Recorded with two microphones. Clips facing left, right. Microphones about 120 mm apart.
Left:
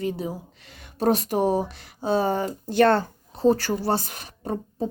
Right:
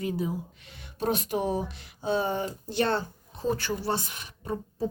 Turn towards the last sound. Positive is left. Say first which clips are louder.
# left 4 dB
turn(degrees=35)  # may be behind; listen again after turning